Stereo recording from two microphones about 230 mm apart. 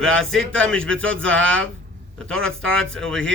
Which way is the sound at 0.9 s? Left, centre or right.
Right.